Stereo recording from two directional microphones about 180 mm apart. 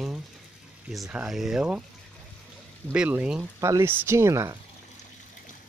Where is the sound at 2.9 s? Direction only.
10° right (ahead or behind).